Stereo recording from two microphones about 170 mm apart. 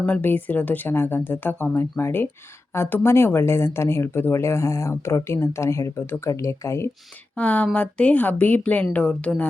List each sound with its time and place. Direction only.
0.0 s speech: 10° left (ahead or behind)